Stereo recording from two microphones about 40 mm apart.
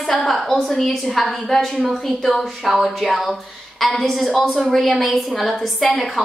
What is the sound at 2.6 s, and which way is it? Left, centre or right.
A woman's voice, centre.